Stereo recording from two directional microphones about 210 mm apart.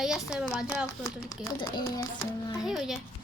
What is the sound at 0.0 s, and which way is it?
Speech, 5° right (ahead or behind).